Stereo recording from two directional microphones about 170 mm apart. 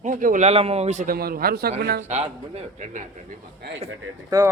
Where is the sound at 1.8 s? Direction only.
80° right.